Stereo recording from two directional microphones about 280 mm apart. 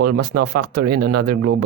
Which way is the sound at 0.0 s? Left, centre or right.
Right.